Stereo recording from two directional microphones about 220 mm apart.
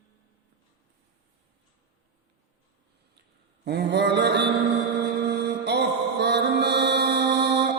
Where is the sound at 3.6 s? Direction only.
50° right (ahead or behind).